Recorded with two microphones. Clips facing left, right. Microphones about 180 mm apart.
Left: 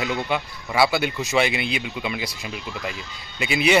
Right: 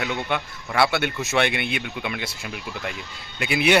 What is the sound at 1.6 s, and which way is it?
Speech, 60° right (ahead or behind).